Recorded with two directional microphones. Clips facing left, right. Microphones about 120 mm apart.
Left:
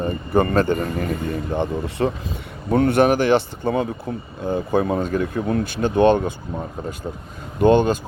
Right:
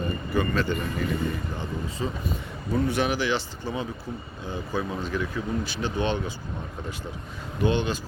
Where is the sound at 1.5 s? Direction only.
65° left (ahead or behind).